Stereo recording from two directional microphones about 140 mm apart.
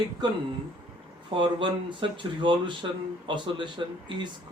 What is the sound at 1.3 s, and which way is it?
Speech, 35° right (ahead or behind).